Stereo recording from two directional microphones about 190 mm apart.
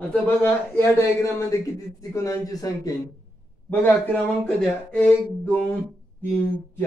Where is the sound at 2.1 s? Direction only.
15° left (ahead or behind).